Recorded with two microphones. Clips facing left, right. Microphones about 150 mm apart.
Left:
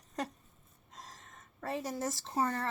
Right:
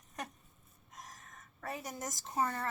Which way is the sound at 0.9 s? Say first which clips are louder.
Even; 30° left (ahead or behind).